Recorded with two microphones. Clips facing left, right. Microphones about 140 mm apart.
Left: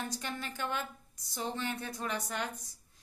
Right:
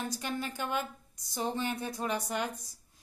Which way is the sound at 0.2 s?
10° right (ahead or behind).